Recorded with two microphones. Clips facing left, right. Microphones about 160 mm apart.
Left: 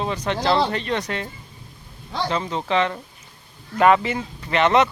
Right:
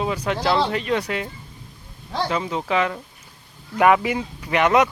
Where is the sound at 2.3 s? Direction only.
5° right (ahead or behind).